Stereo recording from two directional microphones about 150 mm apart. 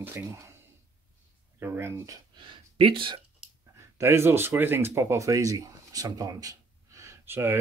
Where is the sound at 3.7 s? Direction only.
20° right (ahead or behind).